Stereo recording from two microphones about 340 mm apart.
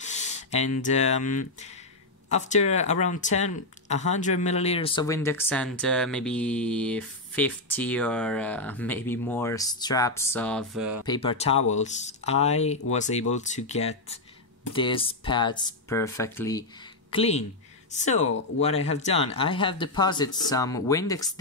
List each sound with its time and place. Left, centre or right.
0.0 s a sound: centre
0.8 s speech: centre
11.1 s speech: centre